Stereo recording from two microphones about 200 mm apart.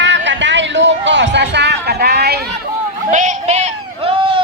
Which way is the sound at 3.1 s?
40° right (ahead or behind).